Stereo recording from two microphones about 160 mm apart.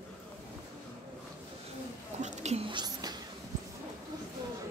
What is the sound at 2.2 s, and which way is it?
Whispering, 45° right (ahead or behind).